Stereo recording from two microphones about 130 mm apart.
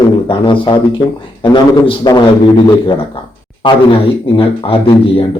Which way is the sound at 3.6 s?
40° left (ahead or behind).